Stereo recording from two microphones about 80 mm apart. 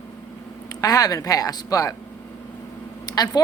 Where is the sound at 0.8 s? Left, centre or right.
Left.